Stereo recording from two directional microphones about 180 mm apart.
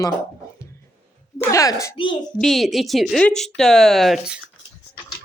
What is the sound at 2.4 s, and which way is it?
Speech, centre (ahead or behind).